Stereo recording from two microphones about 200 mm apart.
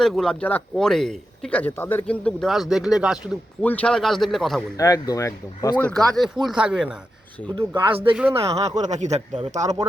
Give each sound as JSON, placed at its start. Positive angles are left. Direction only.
{"t": 0.0, "sound": "speech", "side_deg": 0}
{"t": 3.6, "sound": "speech", "side_deg": 5}
{"t": 4.8, "sound": "speech", "side_deg": 15}
{"t": 7.5, "sound": "speech", "side_deg": -25}
{"t": 8.1, "sound": "speech", "side_deg": -5}
{"t": 8.4, "sound": "speech", "side_deg": -30}